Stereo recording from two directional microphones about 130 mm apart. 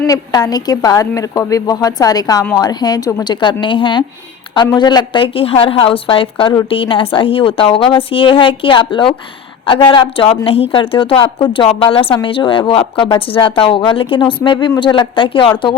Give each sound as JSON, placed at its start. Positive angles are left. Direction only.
{"t": 0.1, "sound": "a woman's voice", "side_deg": 30}